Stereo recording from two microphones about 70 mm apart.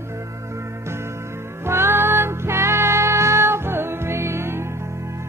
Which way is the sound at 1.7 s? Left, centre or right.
Right.